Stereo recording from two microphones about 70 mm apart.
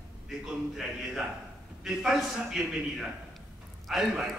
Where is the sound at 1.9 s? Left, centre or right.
Centre.